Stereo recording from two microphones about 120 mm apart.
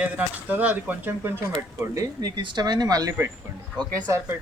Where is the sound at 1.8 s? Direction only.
25° right (ahead or behind).